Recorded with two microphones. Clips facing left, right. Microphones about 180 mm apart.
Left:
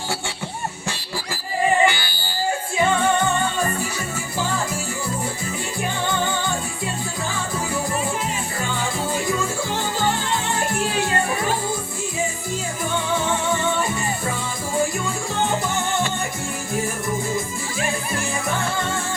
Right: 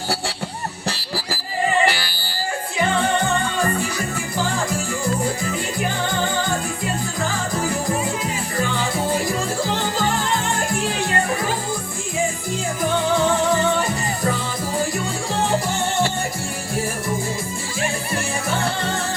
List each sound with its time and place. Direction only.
0.9 s a sound: 35° right (ahead or behind)
1.8 s music: 35° right (ahead or behind)
9.1 s music: 35° right (ahead or behind)
12.8 s music: 35° right (ahead or behind)
14.8 s music: 35° right (ahead or behind)
18.5 s music: 35° right (ahead or behind)